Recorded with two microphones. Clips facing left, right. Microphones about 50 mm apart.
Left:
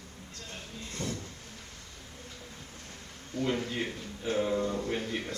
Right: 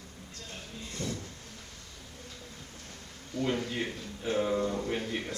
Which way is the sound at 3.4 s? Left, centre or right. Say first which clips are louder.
Even; centre.